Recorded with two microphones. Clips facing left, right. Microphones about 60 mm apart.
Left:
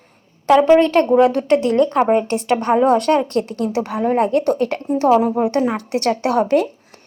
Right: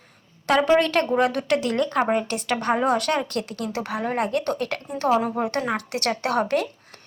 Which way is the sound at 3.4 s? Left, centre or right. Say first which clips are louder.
Left 8 dB; left.